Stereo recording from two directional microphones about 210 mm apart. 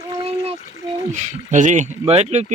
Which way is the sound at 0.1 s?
30° right (ahead or behind).